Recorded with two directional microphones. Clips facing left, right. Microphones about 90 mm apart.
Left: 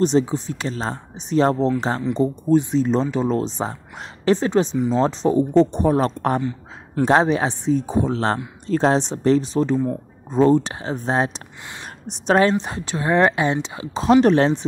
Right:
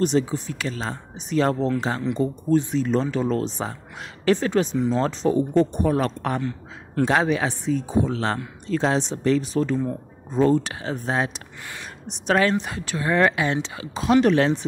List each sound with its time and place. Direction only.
0.0 s speech: 25° left (ahead or behind)